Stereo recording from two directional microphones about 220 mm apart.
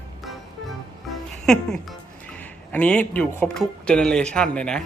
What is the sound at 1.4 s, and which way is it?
Speech, centre (ahead or behind).